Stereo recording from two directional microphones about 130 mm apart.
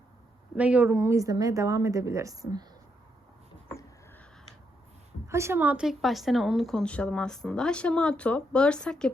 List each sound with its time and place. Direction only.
0.5 s speech: 10° right (ahead or behind); by 2.6 s 30° right (ahead or behind)
5.3 s a woman's voice: 20° right (ahead or behind); by 9.1 s 5° left (ahead or behind)